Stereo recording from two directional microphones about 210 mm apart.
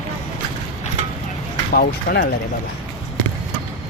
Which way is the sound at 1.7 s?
45° left (ahead or behind).